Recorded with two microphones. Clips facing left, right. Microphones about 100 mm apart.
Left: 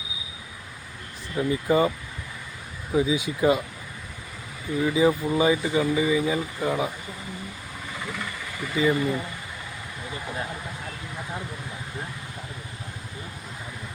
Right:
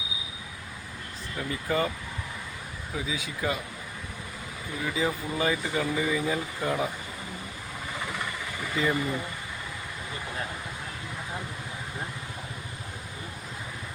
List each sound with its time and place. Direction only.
1.4 s speech: 15° left (ahead or behind)
2.9 s speech: 20° left (ahead or behind)
4.9 s speech: 15° left (ahead or behind)
8.7 s speech: 5° left (ahead or behind)